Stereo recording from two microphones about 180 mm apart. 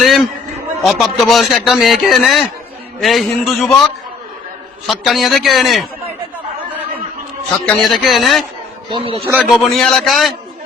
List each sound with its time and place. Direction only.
0.0 s a sound: centre (ahead or behind)
0.8 s speech: centre (ahead or behind)
7.6 s speech: 5° left (ahead or behind)
8.9 s a man's voice: 30° right (ahead or behind)
9.2 s a man's voice: 10° right (ahead or behind)
9.5 s speech: centre (ahead or behind)